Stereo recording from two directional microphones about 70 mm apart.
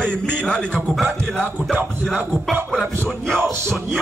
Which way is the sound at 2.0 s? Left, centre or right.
Centre.